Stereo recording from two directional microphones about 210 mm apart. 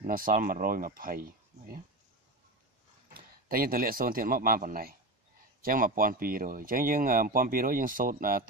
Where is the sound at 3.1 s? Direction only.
45° right (ahead or behind).